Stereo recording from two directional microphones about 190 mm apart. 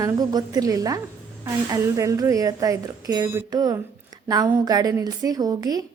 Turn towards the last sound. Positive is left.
turn(degrees=-20)  # may be behind; listen again after turning